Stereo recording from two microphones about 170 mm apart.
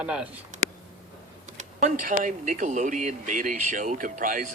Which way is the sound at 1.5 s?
50° right (ahead or behind).